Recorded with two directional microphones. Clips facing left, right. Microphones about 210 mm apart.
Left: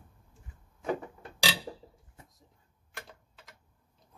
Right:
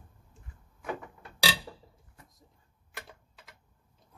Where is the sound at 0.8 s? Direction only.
30° left (ahead or behind).